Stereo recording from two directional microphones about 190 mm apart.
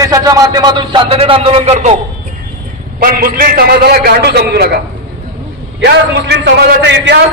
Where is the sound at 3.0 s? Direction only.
50° right (ahead or behind).